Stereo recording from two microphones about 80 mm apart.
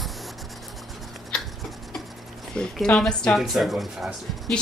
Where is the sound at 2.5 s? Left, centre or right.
Centre.